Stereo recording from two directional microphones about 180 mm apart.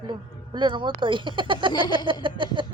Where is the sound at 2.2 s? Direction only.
25° right (ahead or behind).